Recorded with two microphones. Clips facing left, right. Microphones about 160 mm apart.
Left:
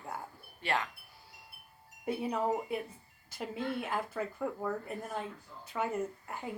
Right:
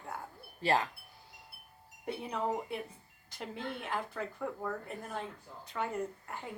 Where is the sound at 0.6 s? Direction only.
35° right (ahead or behind).